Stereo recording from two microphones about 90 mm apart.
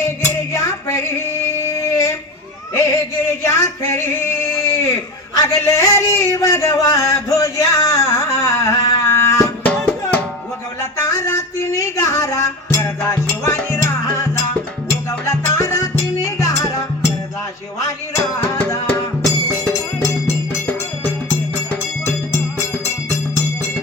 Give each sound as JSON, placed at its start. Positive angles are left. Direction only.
{"t": 0.5, "sound": "music", "side_deg": 35}
{"t": 1.6, "sound": "a sound", "side_deg": 35}
{"t": 2.7, "sound": "music", "side_deg": 35}
{"t": 10.9, "sound": "music", "side_deg": 35}
{"t": 15.3, "sound": "music", "side_deg": 35}
{"t": 18.1, "sound": "music", "side_deg": 20}
{"t": 19.2, "sound": "music", "side_deg": 35}